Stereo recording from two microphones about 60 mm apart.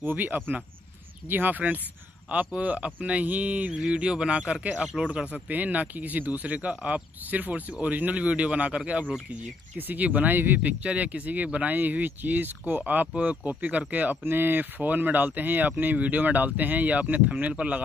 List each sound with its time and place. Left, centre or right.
0.0 s speech: right
10.8 s speech: right